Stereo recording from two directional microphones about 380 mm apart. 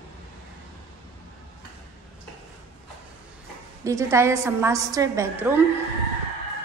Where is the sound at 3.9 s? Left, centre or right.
Centre.